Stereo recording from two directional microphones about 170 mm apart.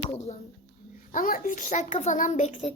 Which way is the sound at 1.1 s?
55° left (ahead or behind).